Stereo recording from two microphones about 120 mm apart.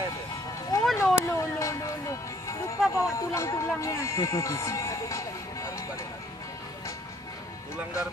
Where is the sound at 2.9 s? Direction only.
25° left (ahead or behind).